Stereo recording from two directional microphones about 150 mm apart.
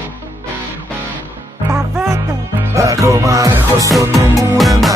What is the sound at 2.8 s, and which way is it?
Music, 20° right (ahead or behind).